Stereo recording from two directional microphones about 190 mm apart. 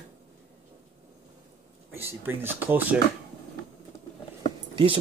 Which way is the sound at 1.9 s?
10° right (ahead or behind).